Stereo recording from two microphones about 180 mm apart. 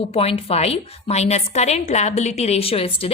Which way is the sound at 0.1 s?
35° left (ahead or behind).